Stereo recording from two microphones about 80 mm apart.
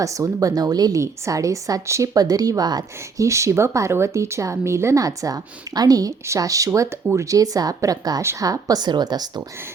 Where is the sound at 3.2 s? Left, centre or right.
Right.